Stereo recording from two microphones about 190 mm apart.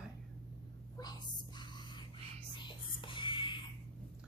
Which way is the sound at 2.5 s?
25° left (ahead or behind).